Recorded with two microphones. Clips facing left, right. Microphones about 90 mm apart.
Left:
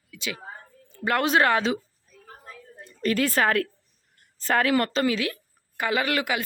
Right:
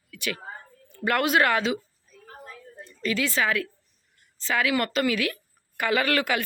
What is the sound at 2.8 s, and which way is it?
A woman's voice, 45° left (ahead or behind).